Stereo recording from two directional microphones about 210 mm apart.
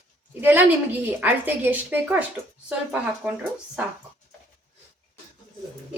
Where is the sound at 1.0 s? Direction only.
10° right (ahead or behind).